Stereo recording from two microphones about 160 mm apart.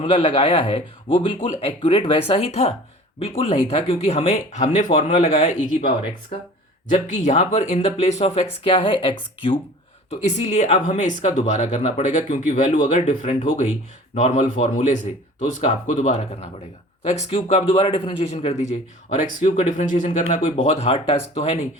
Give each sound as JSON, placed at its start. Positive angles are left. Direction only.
{"t": 0.0, "sound": "speech", "side_deg": 35}
{"t": 6.9, "sound": "speech", "side_deg": 50}
{"t": 8.6, "sound": "speech", "side_deg": 30}
{"t": 10.1, "sound": "speech", "side_deg": 45}